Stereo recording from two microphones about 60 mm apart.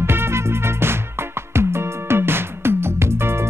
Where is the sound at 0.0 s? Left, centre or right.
Right.